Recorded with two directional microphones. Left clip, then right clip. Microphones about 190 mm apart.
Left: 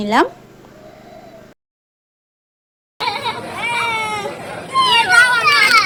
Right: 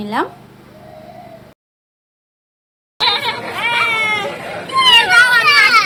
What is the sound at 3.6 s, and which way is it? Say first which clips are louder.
Baby cry: right 4 dB; centre (ahead or behind).